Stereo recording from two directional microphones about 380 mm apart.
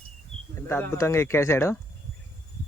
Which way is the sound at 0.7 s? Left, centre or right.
Centre.